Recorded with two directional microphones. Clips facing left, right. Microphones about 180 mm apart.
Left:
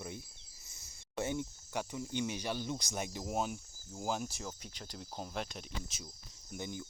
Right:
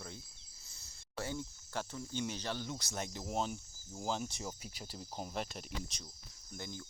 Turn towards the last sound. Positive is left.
turn(degrees=15)  # may be behind; listen again after turning